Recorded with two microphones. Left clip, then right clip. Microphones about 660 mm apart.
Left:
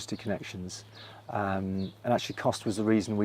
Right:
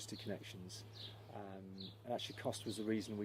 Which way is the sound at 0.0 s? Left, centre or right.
Left.